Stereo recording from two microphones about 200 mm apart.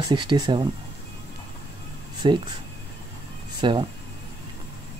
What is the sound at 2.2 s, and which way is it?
Speech, 25° right (ahead or behind).